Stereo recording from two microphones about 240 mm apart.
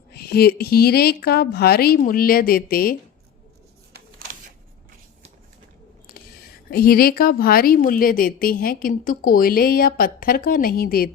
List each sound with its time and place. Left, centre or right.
0.1 s a woman's voice: left
6.7 s a woman's voice: left